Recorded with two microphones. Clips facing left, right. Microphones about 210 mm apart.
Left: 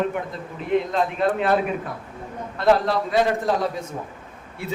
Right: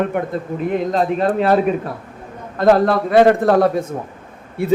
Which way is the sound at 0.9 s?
40° right (ahead or behind).